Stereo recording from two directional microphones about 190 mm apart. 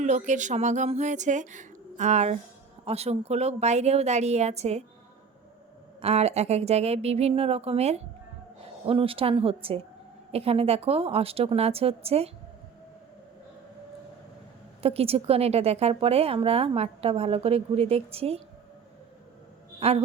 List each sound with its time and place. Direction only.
0.0 s speech: 40° right (ahead or behind)
6.0 s speech: 35° right (ahead or behind)
14.8 s speech: 30° right (ahead or behind)
19.8 s speech: 30° right (ahead or behind)